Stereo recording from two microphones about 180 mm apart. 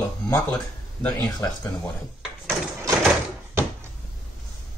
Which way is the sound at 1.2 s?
20° left (ahead or behind).